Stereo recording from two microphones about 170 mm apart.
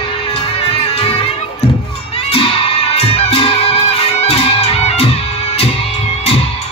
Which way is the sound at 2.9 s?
35° left (ahead or behind).